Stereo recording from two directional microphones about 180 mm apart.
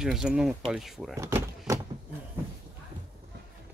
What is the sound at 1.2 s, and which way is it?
Door, 15° right (ahead or behind).